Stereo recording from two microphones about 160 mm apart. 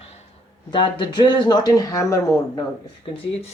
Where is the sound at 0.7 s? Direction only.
30° left (ahead or behind).